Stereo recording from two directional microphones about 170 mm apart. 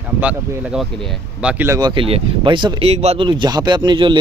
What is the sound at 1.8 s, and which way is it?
Speech, 25° right (ahead or behind).